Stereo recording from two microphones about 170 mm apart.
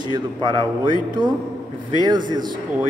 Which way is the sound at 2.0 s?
25° right (ahead or behind).